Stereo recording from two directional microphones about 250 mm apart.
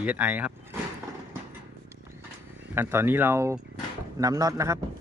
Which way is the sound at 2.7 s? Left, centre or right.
Centre.